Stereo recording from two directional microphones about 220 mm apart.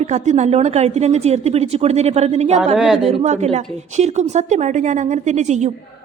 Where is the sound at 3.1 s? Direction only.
30° right (ahead or behind).